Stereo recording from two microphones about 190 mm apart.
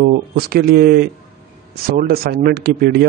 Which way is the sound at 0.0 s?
50° right (ahead or behind).